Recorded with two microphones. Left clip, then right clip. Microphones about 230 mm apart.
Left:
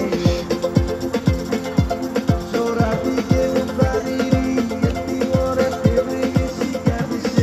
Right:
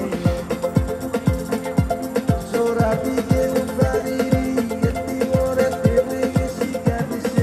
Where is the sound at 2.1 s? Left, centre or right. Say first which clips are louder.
Even; right.